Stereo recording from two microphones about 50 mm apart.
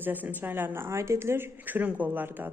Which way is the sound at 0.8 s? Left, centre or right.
Right.